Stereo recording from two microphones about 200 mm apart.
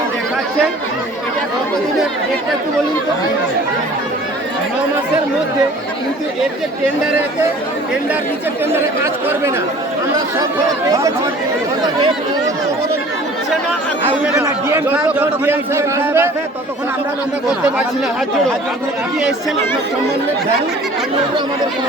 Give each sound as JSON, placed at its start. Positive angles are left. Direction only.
{"t": 14.4, "sound": "a man's voice", "side_deg": -15}